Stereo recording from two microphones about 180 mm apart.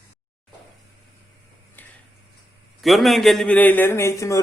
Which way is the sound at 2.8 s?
Centre (ahead or behind).